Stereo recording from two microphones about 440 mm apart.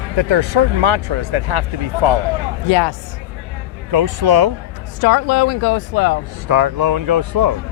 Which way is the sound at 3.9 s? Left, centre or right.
Right.